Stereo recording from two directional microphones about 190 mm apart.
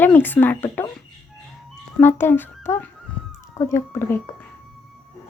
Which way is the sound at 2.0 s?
10° left (ahead or behind).